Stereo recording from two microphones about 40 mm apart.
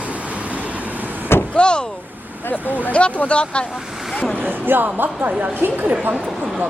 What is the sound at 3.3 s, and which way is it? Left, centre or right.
Speech, left.